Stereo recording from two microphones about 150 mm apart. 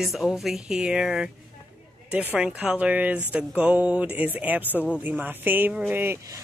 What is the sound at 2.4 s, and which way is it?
Speech, 5° right (ahead or behind).